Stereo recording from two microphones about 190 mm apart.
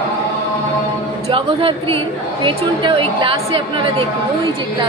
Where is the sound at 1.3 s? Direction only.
25° right (ahead or behind).